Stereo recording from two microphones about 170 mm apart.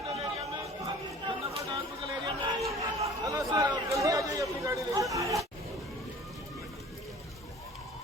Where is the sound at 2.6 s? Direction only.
20° right (ahead or behind).